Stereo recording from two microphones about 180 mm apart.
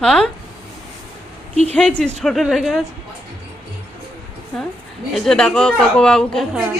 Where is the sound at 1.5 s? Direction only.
35° right (ahead or behind).